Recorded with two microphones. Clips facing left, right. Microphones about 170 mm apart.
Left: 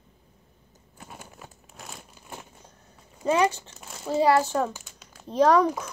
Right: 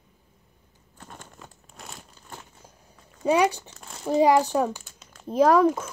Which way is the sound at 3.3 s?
15° right (ahead or behind).